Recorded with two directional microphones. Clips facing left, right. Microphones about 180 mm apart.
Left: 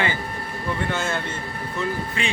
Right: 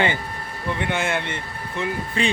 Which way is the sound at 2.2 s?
35° right (ahead or behind).